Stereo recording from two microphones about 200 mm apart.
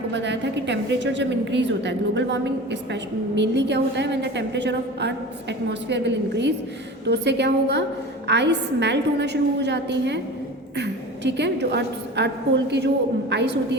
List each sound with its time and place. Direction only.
0.1 s a woman's voice: 60° right (ahead or behind)